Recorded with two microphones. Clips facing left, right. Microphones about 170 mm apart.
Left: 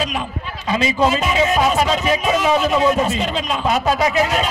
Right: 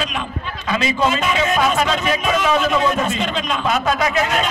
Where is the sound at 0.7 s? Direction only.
35° left (ahead or behind).